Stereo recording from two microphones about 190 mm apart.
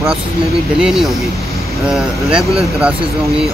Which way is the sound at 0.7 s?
Centre (ahead or behind).